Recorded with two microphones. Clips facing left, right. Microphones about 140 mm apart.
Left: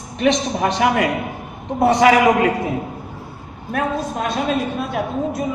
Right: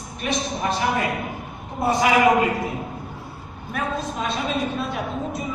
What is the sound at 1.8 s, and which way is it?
Speech, 75° left (ahead or behind).